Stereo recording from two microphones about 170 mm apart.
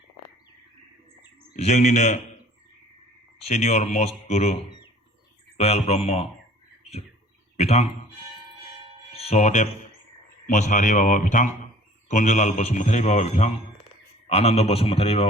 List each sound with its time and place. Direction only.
1.5 s a man's voice: 40° left (ahead or behind)
3.4 s a man's voice: 40° left (ahead or behind)
7.5 s a man's voice: 40° left (ahead or behind)
9.1 s a man's voice: 40° left (ahead or behind)